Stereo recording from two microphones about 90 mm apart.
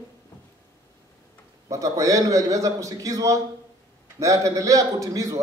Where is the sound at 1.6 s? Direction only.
40° right (ahead or behind).